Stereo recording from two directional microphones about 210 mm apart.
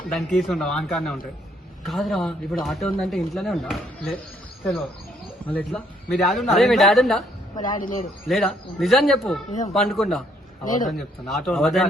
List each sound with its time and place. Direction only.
0.3 s speech: centre (ahead or behind)
5.5 s speech: 5° left (ahead or behind)
7.5 s a man's voice: 20° left (ahead or behind)
8.3 s speech: centre (ahead or behind)
9.5 s speech: 35° left (ahead or behind)
9.7 s speech: centre (ahead or behind)
10.6 s a man's voice: 40° left (ahead or behind)
10.8 s speech: centre (ahead or behind)